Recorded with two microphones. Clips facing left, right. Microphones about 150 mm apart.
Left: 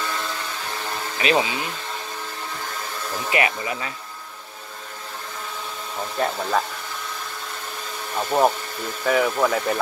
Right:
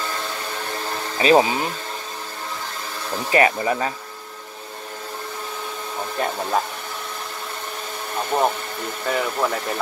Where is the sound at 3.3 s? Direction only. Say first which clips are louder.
Right 6 dB; 35° right (ahead or behind).